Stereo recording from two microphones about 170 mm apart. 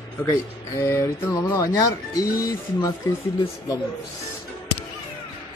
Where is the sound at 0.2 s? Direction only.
15° left (ahead or behind).